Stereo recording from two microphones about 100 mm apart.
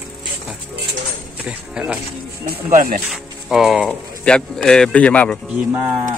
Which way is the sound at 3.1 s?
5° right (ahead or behind).